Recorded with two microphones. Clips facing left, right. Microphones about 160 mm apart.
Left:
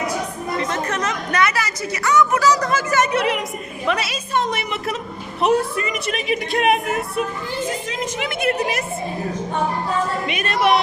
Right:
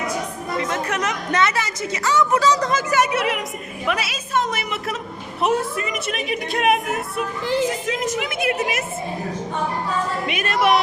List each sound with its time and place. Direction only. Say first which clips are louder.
0.6 s a woman's voice: even; 10° right (ahead or behind)
10.3 s a woman's voice: right 1 dB; 5° right (ahead or behind)